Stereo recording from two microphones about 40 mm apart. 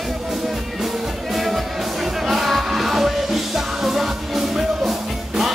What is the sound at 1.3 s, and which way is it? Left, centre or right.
Music, centre.